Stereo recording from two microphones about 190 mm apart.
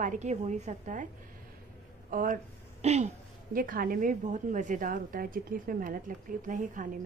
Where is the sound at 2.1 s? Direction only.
45° right (ahead or behind).